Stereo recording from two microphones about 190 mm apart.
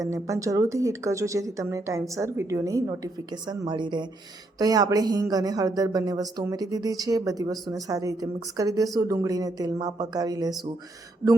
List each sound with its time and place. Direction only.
0.0 s speech: 15° right (ahead or behind)